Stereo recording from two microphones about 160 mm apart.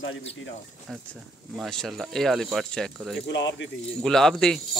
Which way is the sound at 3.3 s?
90° left.